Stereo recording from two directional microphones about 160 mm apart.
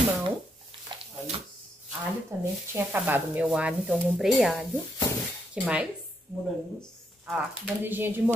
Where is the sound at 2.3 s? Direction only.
20° right (ahead or behind).